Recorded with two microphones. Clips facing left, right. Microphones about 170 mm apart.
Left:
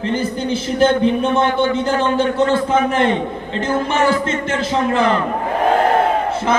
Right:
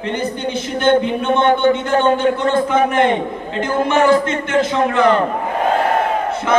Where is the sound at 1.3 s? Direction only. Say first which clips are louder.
Right 2 dB; 35° right (ahead or behind).